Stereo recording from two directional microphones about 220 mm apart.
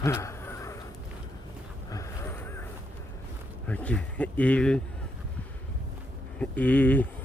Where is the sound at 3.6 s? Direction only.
5° left (ahead or behind).